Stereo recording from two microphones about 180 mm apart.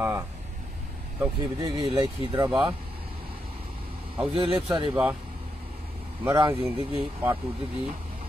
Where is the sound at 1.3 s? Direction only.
25° right (ahead or behind).